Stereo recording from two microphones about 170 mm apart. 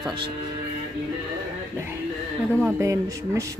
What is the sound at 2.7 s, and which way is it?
Speech, 15° right (ahead or behind).